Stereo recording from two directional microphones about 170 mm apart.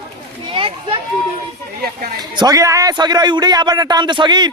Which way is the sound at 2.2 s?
25° right (ahead or behind).